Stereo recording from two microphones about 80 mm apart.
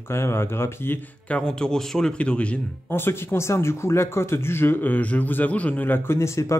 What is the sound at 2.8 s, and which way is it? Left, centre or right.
Speech, left.